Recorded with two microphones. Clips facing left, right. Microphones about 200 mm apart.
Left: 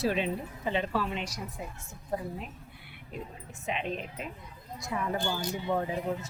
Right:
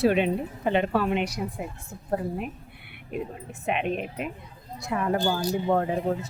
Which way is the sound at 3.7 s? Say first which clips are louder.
Right 6 dB; 60° right (ahead or behind).